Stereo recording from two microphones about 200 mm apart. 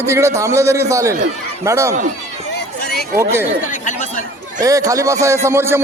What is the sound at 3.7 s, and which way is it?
Chatter, 40° left (ahead or behind).